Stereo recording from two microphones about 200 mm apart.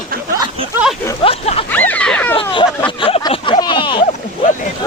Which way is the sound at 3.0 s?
25° left (ahead or behind).